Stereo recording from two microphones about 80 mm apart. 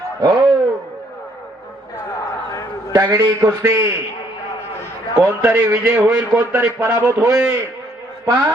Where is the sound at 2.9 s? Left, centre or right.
Right.